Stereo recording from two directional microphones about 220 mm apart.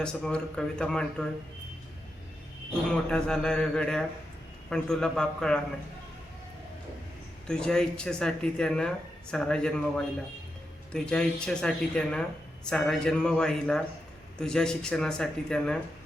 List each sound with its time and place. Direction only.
0.0 s speech: 5° left (ahead or behind)
3.1 s speech: 5° left (ahead or behind)
7.4 s speech: 5° left (ahead or behind)